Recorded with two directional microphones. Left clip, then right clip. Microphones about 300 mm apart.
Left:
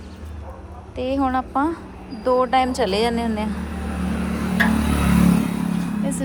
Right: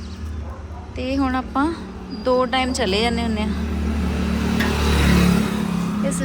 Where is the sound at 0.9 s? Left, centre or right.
Centre.